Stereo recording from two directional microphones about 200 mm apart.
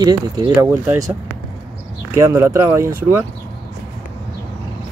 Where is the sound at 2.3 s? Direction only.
15° right (ahead or behind).